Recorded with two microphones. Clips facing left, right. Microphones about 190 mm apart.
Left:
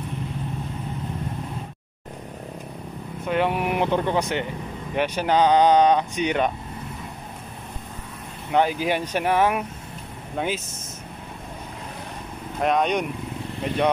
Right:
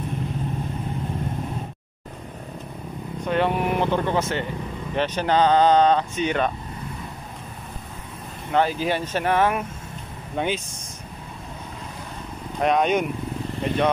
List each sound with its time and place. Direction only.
3.3 s speech: 10° left (ahead or behind)
8.5 s speech: 15° left (ahead or behind)
12.6 s speech: centre (ahead or behind)